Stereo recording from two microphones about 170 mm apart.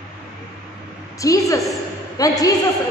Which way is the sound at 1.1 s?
20° left (ahead or behind).